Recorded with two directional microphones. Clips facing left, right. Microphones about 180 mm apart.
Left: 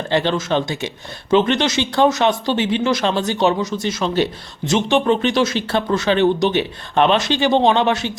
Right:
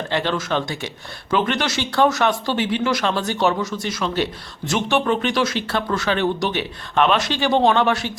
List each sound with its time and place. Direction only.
0.1 s speech: 25° left (ahead or behind)